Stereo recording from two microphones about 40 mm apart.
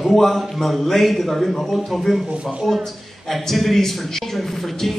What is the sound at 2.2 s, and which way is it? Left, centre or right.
Speech, right.